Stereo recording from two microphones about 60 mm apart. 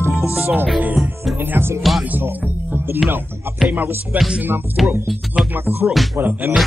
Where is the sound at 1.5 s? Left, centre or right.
Right.